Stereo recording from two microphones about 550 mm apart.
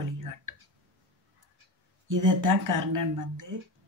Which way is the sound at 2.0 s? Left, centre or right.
Right.